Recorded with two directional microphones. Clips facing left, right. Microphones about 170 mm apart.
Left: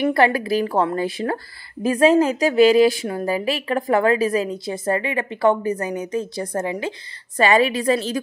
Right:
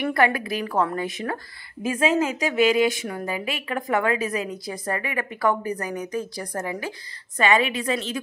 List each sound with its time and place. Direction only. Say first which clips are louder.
0.0 s a woman's voice: left 4 dB; 30° left (ahead or behind)
7.3 s a woman's voice: left 4 dB; 35° left (ahead or behind)